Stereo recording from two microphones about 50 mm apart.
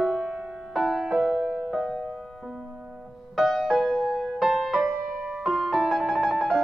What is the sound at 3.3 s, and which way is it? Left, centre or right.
Music, centre.